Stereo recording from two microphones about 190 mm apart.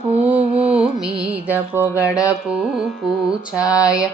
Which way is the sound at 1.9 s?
15° left (ahead or behind).